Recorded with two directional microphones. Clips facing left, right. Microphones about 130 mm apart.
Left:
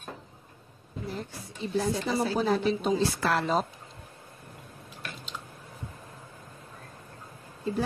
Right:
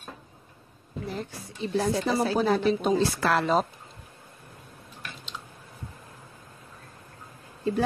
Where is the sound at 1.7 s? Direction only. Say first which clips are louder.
Right 3 dB; 75° right (ahead or behind).